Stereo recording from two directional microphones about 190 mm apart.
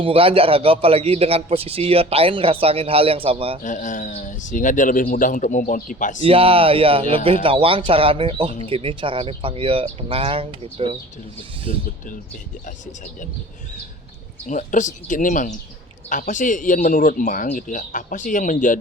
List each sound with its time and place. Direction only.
0.0 s a man's voice: 30° right (ahead or behind)
3.6 s speech: 40° left (ahead or behind)
6.2 s speech: 30° right (ahead or behind)
14.4 s speech: 40° left (ahead or behind)